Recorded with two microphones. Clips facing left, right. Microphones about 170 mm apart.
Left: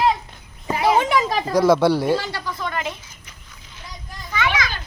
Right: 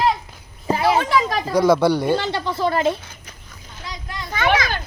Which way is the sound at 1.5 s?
Centre (ahead or behind).